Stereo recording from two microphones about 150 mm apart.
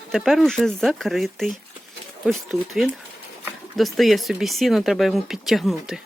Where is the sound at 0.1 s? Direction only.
Centre (ahead or behind).